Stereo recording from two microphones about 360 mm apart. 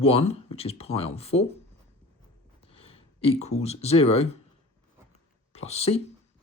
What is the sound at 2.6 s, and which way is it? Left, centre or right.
Speech, centre.